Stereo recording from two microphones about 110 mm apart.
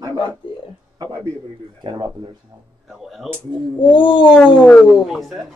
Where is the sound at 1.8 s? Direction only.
50° right (ahead or behind).